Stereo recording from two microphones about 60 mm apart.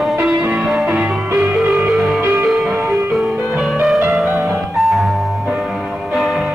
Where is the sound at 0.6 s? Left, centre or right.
Centre.